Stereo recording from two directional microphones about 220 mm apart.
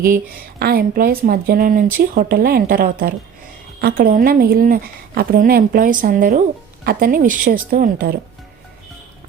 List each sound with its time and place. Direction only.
0.6 s a woman's voice: 45° right (ahead or behind)